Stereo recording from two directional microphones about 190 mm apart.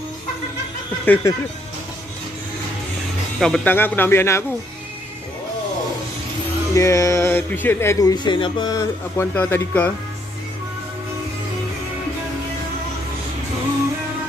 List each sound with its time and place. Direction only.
1.0 s speech: 10° left (ahead or behind)
3.3 s speech: 5° left (ahead or behind)
6.7 s speech: 15° left (ahead or behind)